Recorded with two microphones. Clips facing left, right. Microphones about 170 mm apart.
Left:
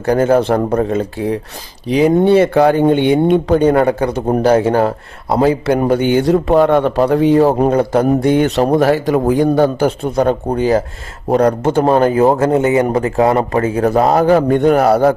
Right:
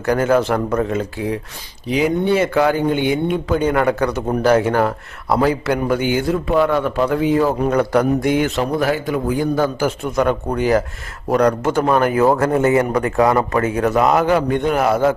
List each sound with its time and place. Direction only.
0.0 s a man's voice: 30° left (ahead or behind)
6.1 s a man's voice: 35° left (ahead or behind)